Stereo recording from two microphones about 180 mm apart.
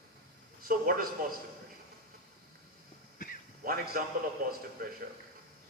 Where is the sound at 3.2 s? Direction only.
45° left (ahead or behind).